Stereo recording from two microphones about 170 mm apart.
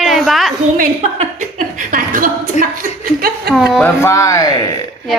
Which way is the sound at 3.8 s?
15° left (ahead or behind).